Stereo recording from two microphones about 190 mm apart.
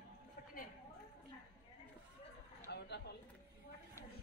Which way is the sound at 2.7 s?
60° left (ahead or behind).